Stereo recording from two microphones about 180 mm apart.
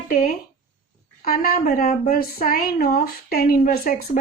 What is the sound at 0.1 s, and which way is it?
Speech, 50° left (ahead or behind).